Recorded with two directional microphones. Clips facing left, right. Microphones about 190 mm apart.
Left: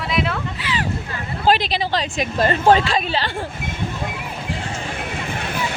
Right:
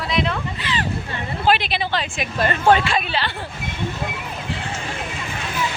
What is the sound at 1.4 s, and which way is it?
A woman's voice, 40° left (ahead or behind).